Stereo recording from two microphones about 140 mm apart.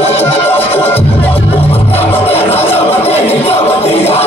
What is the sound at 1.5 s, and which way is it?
Music, 45° left (ahead or behind).